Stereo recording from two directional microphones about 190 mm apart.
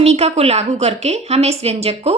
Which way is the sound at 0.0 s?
35° right (ahead or behind).